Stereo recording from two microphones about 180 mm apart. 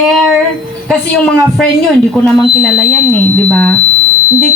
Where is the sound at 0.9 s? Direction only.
Centre (ahead or behind).